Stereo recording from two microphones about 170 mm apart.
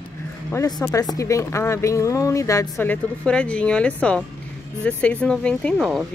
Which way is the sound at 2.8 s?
10° left (ahead or behind).